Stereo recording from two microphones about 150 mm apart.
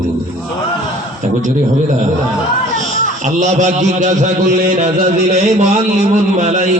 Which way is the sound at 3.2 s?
55° right (ahead or behind).